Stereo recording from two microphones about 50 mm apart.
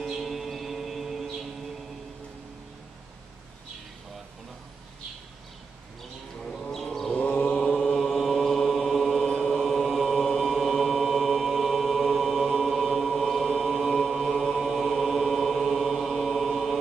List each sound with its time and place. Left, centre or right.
0.1 s music: centre
6.7 s a sound: centre
7.2 s mantra: left
7.7 s chant: centre